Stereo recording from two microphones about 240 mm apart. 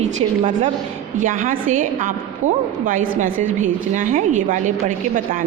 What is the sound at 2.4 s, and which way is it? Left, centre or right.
Speech, right.